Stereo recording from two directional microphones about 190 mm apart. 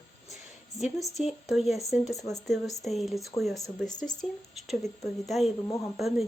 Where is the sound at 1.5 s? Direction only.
Centre (ahead or behind).